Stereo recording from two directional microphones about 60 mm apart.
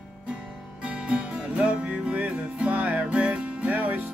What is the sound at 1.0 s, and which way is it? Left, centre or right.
Music, centre.